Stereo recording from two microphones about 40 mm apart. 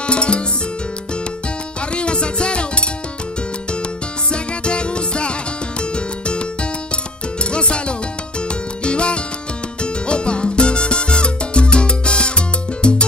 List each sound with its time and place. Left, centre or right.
0.0 s music: left
2.0 s music: left
4.3 s music: left
7.5 s music: left
10.0 s salsa music: left